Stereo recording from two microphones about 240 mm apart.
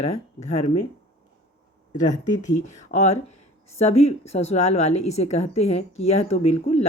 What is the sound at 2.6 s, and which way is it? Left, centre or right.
A woman's voice, left.